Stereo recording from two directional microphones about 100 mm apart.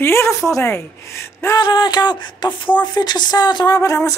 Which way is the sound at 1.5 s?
45° left (ahead or behind).